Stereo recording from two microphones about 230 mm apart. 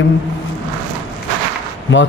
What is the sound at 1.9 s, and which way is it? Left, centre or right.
Speech, left.